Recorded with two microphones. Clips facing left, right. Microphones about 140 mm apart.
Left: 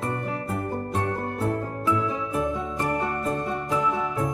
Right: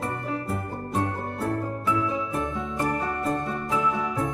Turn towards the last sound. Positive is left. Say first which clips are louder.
# even
turn(degrees=0)  # may be behind; listen again after turning